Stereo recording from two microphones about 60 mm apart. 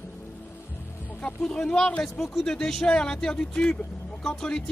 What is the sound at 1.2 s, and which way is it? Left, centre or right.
Speech, centre.